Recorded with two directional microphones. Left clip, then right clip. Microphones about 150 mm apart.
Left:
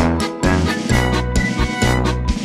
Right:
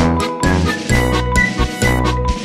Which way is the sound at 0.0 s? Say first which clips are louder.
Right 2 dB; 5° right (ahead or behind).